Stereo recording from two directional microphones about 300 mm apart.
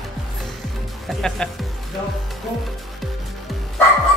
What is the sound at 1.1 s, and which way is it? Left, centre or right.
Speech, centre.